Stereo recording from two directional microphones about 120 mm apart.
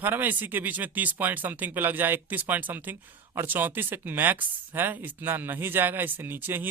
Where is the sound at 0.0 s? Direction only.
15° right (ahead or behind).